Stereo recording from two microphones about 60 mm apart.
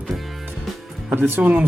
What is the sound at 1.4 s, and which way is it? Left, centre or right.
Speech, right.